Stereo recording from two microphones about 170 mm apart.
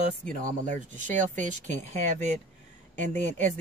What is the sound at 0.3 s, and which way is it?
Speech, 50° right (ahead or behind).